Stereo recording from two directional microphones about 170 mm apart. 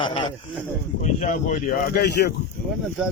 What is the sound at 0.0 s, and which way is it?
Speech, 30° left (ahead or behind).